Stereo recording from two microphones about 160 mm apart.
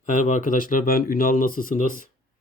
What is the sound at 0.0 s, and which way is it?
Speech, 50° left (ahead or behind).